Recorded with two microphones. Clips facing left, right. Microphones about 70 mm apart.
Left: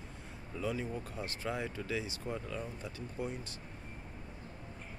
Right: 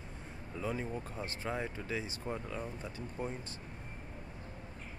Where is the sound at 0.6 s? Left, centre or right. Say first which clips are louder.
Left 1 dB; right.